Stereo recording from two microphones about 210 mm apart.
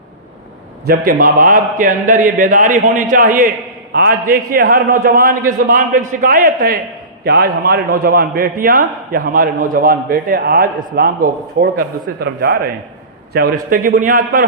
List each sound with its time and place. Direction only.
0.9 s a man's voice: 40° right (ahead or behind)